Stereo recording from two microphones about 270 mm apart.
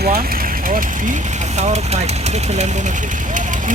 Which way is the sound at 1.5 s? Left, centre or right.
Right.